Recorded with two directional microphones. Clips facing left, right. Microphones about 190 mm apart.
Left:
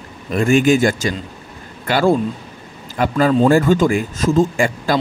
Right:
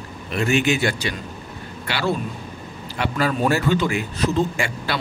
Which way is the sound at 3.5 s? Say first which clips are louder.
Left 7 dB; 45° left (ahead or behind).